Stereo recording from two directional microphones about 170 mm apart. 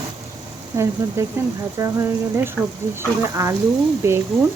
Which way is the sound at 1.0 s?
15° right (ahead or behind).